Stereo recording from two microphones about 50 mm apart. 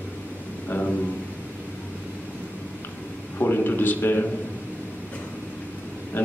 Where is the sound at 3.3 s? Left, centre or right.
Left.